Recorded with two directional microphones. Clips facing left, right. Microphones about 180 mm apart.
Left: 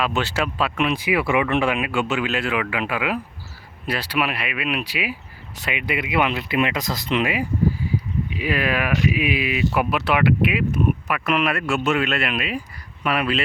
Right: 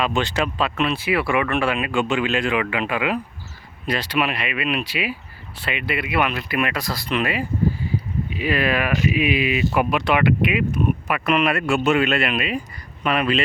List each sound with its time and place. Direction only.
0.0 s speech: 5° left (ahead or behind)